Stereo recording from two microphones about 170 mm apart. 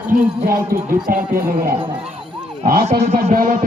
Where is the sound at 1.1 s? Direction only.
55° right (ahead or behind).